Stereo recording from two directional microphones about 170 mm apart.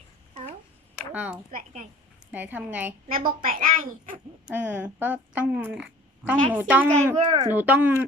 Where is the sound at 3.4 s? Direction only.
55° right (ahead or behind).